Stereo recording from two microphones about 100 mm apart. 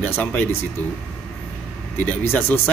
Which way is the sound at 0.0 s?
20° left (ahead or behind).